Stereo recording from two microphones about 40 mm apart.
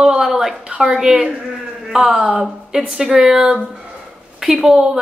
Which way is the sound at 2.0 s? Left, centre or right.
Right.